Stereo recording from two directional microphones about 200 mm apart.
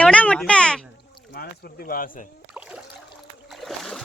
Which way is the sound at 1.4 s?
50° left (ahead or behind).